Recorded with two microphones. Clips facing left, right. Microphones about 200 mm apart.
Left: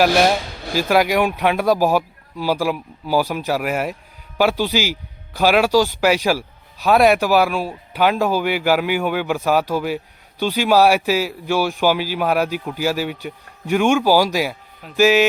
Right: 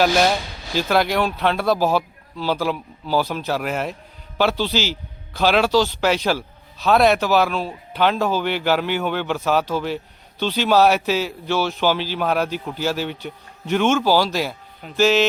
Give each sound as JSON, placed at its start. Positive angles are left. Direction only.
{"t": 0.8, "sound": "a man's voice", "side_deg": 10}